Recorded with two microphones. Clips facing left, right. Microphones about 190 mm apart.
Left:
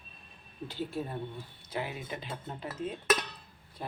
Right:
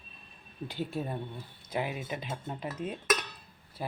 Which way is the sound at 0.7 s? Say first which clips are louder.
Right 1 dB; 15° right (ahead or behind).